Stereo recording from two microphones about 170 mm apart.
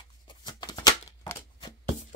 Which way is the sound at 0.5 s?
25° left (ahead or behind).